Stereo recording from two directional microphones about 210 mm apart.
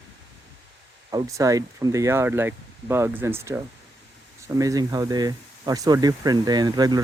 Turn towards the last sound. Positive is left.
turn(degrees=-20)  # may be behind; listen again after turning